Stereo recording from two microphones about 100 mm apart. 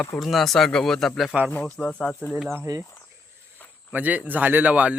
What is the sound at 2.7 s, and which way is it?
Speech, 40° right (ahead or behind).